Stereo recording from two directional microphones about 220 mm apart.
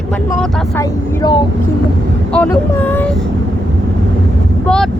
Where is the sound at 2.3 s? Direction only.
10° left (ahead or behind).